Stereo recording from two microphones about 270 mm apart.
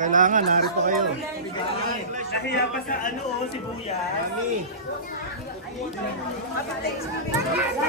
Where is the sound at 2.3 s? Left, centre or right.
Left.